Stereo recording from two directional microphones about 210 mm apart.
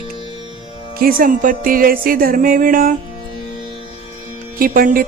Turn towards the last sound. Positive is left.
turn(degrees=-40)  # may be behind; listen again after turning